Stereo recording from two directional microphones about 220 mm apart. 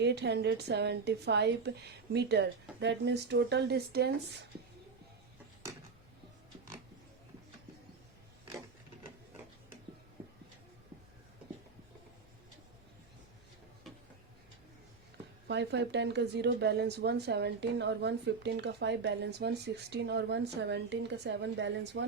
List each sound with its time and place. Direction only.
0.0 s a woman's voice: 50° right (ahead or behind)
15.4 s a woman's voice: 50° right (ahead or behind)